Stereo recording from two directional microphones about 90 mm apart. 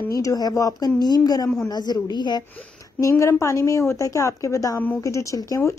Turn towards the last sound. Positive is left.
turn(degrees=35)  # may be behind; listen again after turning